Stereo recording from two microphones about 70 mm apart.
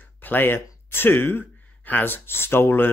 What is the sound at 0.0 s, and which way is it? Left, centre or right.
Speech, left.